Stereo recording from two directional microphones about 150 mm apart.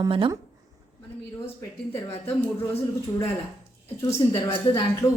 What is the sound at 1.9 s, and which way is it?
Speech, 15° left (ahead or behind).